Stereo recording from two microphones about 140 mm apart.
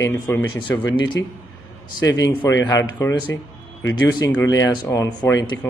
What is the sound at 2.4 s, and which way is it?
Speech, 20° left (ahead or behind).